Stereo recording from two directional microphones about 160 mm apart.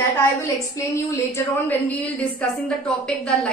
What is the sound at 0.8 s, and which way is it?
A woman's voice, 20° left (ahead or behind).